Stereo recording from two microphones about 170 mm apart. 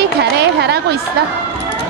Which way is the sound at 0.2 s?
75° right (ahead or behind).